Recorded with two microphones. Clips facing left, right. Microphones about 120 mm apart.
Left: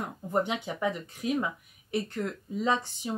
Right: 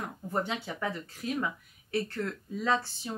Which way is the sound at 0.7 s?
15° left (ahead or behind).